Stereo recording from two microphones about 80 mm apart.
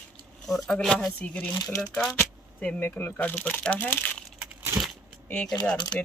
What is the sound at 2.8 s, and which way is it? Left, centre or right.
Speech, left.